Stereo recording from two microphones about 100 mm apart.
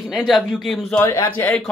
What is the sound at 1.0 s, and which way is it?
Speech, 30° left (ahead or behind).